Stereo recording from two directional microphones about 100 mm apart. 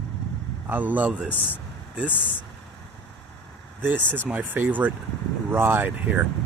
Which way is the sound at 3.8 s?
20° right (ahead or behind).